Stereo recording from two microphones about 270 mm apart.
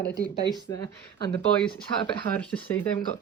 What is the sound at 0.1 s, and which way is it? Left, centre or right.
Speech, centre.